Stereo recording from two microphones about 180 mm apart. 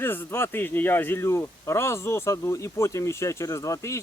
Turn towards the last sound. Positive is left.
turn(degrees=15)  # may be behind; listen again after turning